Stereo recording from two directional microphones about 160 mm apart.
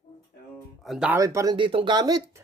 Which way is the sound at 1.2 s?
20° right (ahead or behind).